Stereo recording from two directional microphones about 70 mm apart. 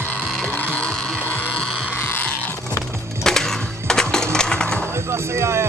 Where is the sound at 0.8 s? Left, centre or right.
Centre.